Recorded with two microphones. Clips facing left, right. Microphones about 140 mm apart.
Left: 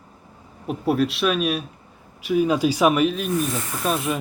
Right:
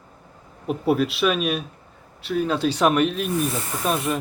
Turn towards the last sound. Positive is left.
turn(degrees=0)  # may be behind; listen again after turning